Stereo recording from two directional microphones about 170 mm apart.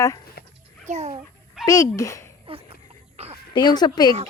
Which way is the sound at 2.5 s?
35° right (ahead or behind).